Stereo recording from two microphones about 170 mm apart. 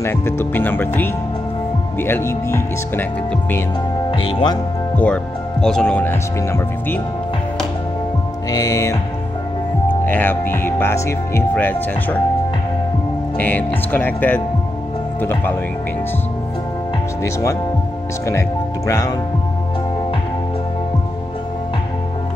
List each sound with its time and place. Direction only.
0.0 s speech: 15° left (ahead or behind)
4.1 s speech: 30° left (ahead or behind)
4.9 s speech: 5° left (ahead or behind)
8.5 s speech: 20° left (ahead or behind)
10.0 s speech: 10° left (ahead or behind)
13.4 s speech: 10° left (ahead or behind)
17.2 s speech: 20° left (ahead or behind)
18.9 s speech: 20° left (ahead or behind)